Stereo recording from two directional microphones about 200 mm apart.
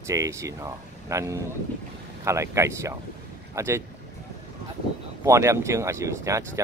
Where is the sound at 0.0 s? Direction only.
15° right (ahead or behind).